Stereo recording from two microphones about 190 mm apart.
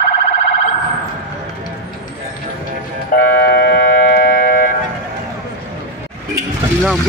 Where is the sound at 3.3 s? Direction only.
55° left (ahead or behind).